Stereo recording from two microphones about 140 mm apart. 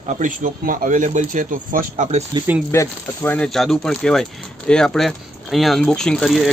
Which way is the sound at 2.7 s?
15° left (ahead or behind).